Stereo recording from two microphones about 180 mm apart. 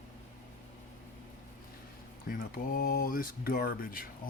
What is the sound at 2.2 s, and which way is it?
Speech, 50° left (ahead or behind).